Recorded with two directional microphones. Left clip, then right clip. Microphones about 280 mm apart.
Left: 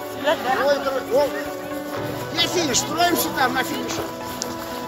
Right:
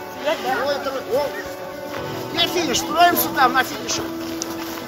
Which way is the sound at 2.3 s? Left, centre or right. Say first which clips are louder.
Right 1 dB; right.